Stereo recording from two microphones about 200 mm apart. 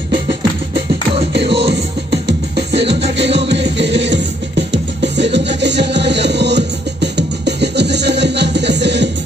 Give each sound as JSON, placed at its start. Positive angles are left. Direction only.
{"t": 0.3, "sound": "music", "side_deg": -55}